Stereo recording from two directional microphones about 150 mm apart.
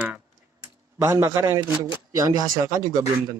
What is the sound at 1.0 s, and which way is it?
A man's voice, 15° right (ahead or behind).